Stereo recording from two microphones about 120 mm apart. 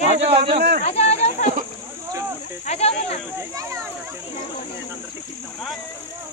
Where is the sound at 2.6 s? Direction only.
60° left (ahead or behind).